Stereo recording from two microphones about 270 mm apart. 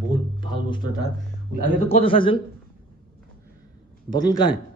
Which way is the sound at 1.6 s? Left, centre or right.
Left.